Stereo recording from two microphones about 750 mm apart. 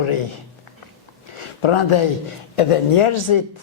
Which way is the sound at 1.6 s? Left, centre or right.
Left.